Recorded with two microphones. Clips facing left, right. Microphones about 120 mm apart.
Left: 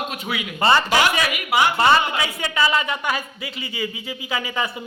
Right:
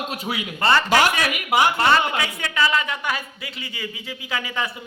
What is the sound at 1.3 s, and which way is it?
Speech, 45° right (ahead or behind).